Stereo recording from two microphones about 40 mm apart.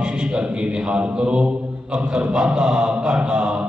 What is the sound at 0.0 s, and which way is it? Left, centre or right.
Mantra, right.